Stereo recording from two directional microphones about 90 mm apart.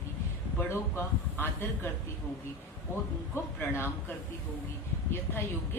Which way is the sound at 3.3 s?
25° left (ahead or behind).